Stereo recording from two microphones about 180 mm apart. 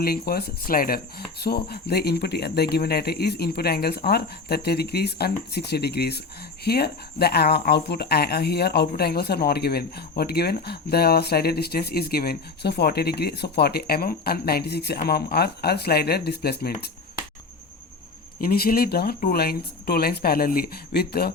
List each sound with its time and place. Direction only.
0.0 s speech: 60° left (ahead or behind)
18.3 s speech: 55° left (ahead or behind)